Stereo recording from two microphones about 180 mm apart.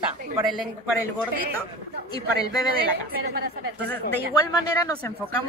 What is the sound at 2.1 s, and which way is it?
Speech, 20° left (ahead or behind).